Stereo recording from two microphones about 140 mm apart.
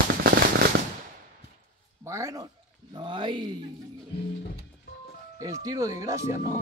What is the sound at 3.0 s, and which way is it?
Speech, 35° right (ahead or behind).